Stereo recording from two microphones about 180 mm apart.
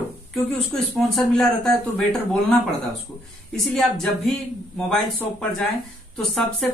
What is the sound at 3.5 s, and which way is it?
Speech, 5° left (ahead or behind).